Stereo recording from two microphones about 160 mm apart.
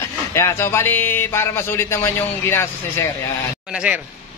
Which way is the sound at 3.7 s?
5° right (ahead or behind).